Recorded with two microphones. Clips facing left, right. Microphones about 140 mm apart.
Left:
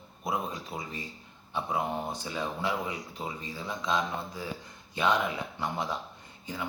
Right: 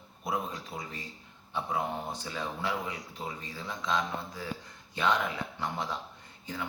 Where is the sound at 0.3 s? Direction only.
15° left (ahead or behind).